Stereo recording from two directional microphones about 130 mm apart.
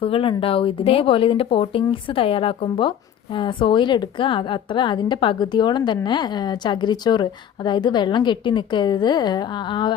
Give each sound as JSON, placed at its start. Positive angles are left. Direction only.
{"t": 0.0, "sound": "a woman's voice", "side_deg": 45}